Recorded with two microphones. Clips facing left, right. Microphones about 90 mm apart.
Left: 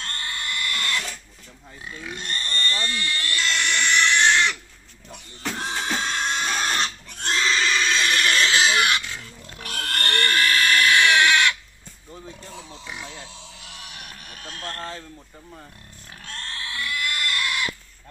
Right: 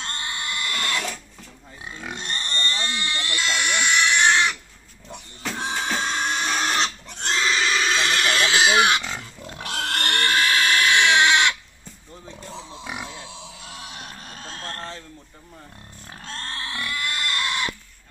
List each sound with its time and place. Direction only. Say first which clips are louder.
0.0 s a sound: right 1 dB; 20° right (ahead or behind)
1.9 s pig: right 1 dB; 25° right (ahead or behind)
5.4 s music: even; centre (ahead or behind)
5.7 s pig: right 2 dB; 10° right (ahead or behind)
13.0 s a sound: right 2 dB; 20° right (ahead or behind)
16.3 s pig: right 2 dB; 30° right (ahead or behind)